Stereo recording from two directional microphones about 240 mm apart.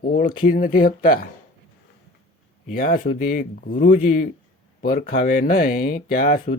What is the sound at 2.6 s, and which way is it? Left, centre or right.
Speech, left.